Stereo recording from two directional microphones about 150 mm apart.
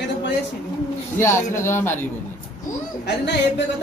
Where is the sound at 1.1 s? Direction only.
15° left (ahead or behind).